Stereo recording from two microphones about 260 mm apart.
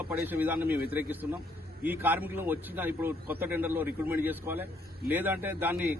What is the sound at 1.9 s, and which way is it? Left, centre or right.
A man's voice, centre.